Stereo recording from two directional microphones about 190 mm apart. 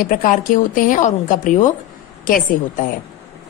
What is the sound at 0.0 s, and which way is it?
A woman's voice, 45° left (ahead or behind).